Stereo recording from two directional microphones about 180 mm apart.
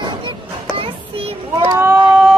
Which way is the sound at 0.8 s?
30° right (ahead or behind).